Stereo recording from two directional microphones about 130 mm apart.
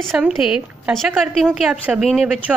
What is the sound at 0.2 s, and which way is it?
A woman's voice, 5° right (ahead or behind).